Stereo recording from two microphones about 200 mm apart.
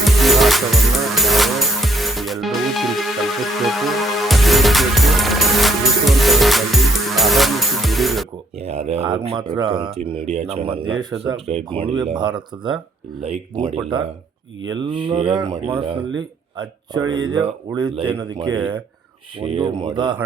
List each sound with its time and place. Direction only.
0.0 s music: centre (ahead or behind)
8.5 s speech: 30° right (ahead or behind)